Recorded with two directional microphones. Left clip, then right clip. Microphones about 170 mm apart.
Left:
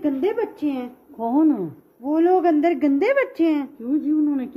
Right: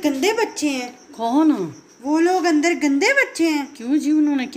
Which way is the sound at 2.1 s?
55° left (ahead or behind).